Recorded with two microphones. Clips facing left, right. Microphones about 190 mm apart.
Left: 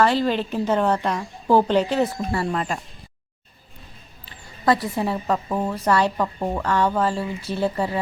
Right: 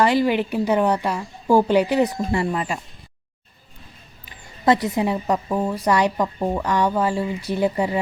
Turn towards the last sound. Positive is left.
turn(degrees=-15)  # may be behind; listen again after turning